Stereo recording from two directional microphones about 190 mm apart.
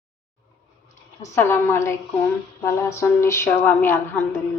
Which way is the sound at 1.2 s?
15° left (ahead or behind).